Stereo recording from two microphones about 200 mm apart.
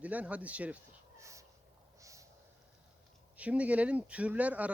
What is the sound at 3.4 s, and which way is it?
Speech, 5° right (ahead or behind).